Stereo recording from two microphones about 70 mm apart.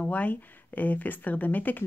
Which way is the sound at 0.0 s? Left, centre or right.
Left.